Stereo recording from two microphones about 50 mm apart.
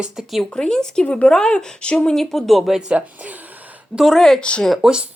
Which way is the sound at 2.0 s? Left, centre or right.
Centre.